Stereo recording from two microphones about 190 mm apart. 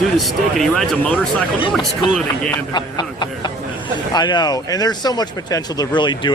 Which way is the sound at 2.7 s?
25° left (ahead or behind).